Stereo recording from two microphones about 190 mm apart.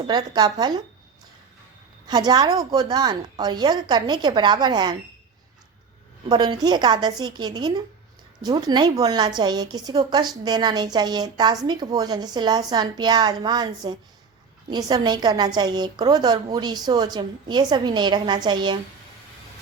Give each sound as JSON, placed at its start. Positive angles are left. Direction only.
{"t": 0.0, "sound": "a woman's voice", "side_deg": -20}
{"t": 2.0, "sound": "a woman's voice", "side_deg": -20}
{"t": 6.2, "sound": "a woman's voice", "side_deg": -25}